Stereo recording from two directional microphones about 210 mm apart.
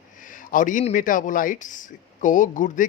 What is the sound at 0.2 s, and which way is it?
Speech, 40° left (ahead or behind).